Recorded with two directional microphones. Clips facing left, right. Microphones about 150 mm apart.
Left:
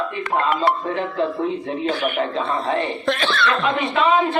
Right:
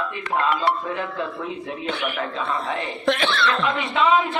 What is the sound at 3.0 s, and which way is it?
Speech, 20° right (ahead or behind).